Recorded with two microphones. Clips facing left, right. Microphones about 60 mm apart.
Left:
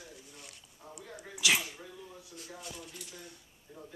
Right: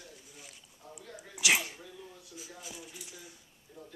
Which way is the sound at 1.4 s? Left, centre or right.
Centre.